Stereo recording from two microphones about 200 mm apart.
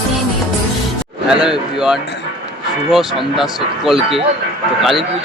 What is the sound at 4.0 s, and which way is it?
Speech, 30° right (ahead or behind).